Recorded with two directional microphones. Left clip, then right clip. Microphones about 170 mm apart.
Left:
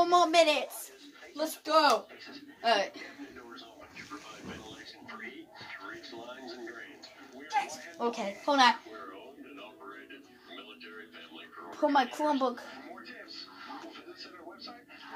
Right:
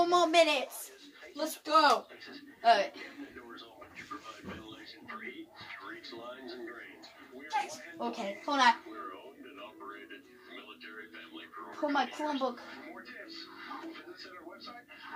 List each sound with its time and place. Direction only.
0.0 s a sound: 5° left (ahead or behind)
1.3 s speech: 25° left (ahead or behind)
2.6 s speech: 20° left (ahead or behind)
7.4 s speech: 20° left (ahead or behind)
8.5 s a child's voice: 40° left (ahead or behind)
11.9 s a woman's voice: 50° left (ahead or behind)